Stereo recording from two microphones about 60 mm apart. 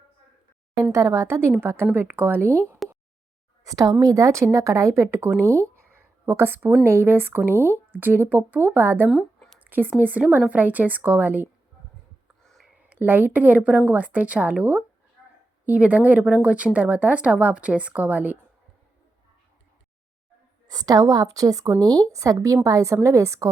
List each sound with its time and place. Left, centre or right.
0.9 s speech: right
3.6 s speech: right
5.4 s a sound: right
6.8 s speech: right
9.6 s a sound: right
10.0 s a woman's voice: right
12.4 s a sound: centre
12.9 s a woman's voice: right
20.7 s a woman's voice: right
21.8 s a woman's voice: right